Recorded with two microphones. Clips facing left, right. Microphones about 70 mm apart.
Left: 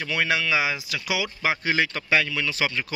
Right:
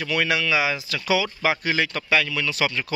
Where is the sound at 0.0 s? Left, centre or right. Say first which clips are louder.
Right 1 dB; left.